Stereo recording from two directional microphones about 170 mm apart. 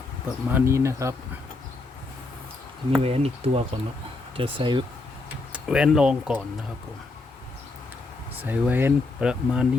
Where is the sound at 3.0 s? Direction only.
35° right (ahead or behind).